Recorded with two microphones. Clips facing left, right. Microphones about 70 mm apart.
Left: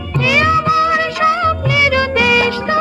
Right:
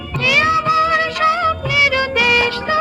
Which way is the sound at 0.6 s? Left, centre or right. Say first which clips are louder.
Left 1 dB; centre.